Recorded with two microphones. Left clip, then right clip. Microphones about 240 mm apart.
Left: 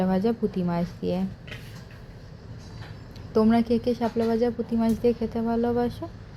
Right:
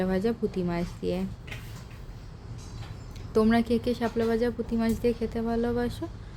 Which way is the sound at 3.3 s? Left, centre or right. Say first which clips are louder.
Left 2 dB; centre.